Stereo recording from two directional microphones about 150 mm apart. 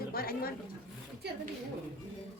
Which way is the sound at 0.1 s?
85° left.